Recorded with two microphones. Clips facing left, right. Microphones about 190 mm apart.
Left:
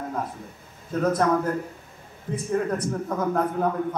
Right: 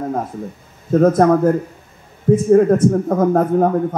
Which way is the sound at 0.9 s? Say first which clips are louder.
Right 10 dB; 45° right (ahead or behind).